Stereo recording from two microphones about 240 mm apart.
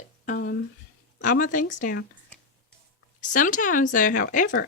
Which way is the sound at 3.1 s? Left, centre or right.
Left.